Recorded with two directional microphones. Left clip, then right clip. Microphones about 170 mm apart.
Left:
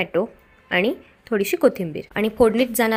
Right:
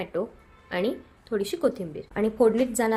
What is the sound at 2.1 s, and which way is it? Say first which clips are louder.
Speech: left 4 dB; 20° left (ahead or behind).